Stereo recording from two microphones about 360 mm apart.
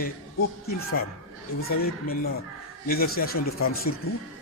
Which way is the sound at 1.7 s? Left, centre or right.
Left.